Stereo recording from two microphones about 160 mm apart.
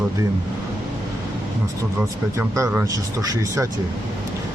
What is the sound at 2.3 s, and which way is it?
Speech, 15° right (ahead or behind).